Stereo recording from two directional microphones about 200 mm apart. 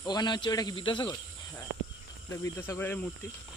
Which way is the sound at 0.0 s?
20° left (ahead or behind).